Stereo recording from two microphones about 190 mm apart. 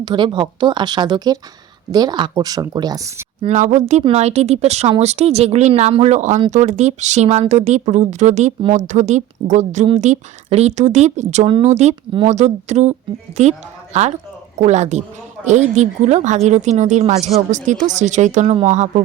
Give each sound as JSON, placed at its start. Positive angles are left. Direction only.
{"t": 0.0, "sound": "speech", "side_deg": -25}
{"t": 3.4, "sound": "speech", "side_deg": -40}